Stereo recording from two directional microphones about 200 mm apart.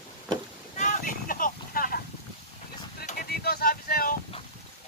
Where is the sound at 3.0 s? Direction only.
50° left (ahead or behind).